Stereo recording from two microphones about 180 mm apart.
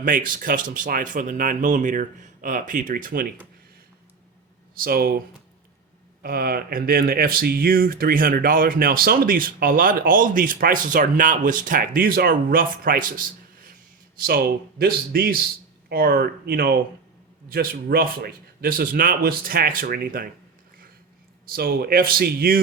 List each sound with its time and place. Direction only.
0.0 s speech: 50° right (ahead or behind)
4.7 s a man's voice: 55° right (ahead or behind)
6.2 s a man's voice: 55° right (ahead or behind)
21.4 s a man's voice: 55° right (ahead or behind)